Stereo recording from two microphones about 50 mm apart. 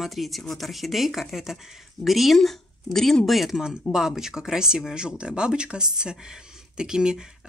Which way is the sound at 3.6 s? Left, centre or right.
Centre.